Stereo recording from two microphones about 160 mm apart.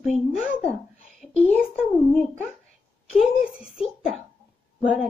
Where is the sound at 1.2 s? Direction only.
10° left (ahead or behind).